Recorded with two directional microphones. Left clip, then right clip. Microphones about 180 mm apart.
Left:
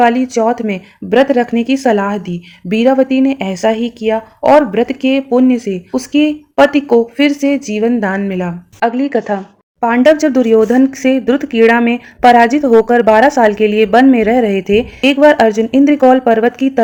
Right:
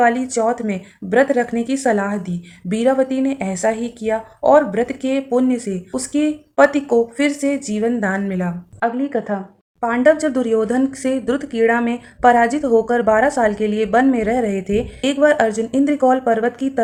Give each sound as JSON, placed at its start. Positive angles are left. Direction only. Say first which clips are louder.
{"t": 0.0, "sound": "speech", "louder": "left 5 dB", "side_deg": 35}